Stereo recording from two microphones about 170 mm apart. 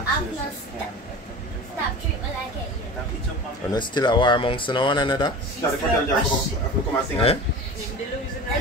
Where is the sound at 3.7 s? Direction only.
25° left (ahead or behind).